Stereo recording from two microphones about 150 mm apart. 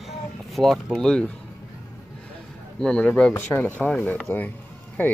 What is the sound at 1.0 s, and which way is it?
Speech, 5° left (ahead or behind).